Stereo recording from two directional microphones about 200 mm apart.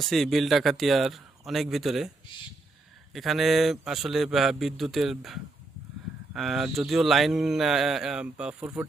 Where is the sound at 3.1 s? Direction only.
Centre (ahead or behind).